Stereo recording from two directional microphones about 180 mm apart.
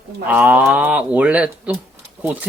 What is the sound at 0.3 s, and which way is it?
Speech, 10° right (ahead or behind).